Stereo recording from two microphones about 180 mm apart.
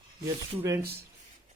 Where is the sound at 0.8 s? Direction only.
60° right (ahead or behind).